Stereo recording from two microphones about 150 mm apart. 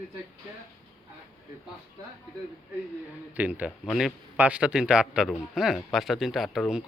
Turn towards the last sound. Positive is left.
turn(degrees=0)  # may be behind; listen again after turning